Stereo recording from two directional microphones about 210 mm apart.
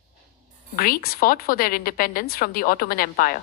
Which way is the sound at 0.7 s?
45° left (ahead or behind).